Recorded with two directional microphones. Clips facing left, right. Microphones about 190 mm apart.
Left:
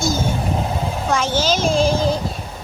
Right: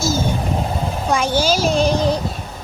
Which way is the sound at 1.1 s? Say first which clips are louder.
Right 2 dB; 15° right (ahead or behind).